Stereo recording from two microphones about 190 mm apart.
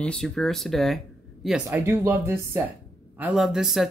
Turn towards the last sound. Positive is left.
turn(degrees=0)  # may be behind; listen again after turning